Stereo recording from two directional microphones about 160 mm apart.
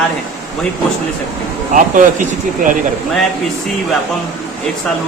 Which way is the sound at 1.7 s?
55° right (ahead or behind).